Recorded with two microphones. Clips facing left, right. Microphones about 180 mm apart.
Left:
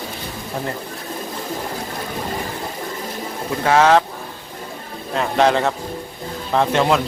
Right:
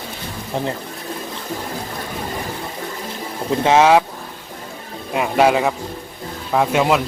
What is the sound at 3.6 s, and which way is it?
Speech, 15° right (ahead or behind).